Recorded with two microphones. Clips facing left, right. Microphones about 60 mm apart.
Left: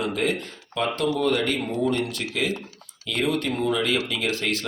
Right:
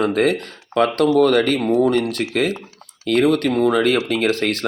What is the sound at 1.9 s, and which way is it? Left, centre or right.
Speech, right.